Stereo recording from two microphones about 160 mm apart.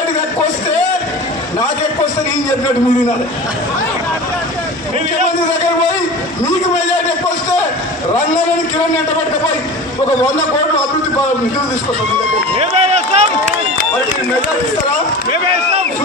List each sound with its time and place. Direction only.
12.5 s run: 40° right (ahead or behind)